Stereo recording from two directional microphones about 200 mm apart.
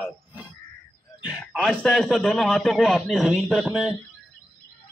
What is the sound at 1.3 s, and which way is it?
A man's voice, centre (ahead or behind).